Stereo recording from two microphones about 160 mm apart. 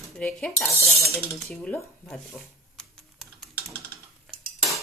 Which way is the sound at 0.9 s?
Centre (ahead or behind).